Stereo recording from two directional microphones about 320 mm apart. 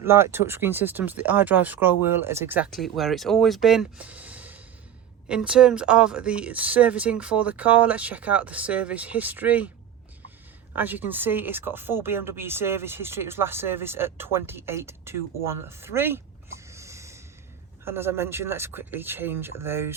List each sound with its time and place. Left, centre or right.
0.0 s speech: centre
10.8 s speech: centre